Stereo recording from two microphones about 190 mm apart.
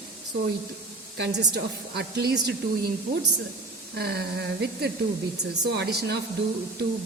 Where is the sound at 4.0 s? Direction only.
55° right (ahead or behind).